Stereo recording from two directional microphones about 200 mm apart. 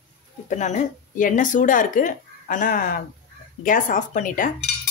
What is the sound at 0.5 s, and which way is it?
Speech, 35° left (ahead or behind).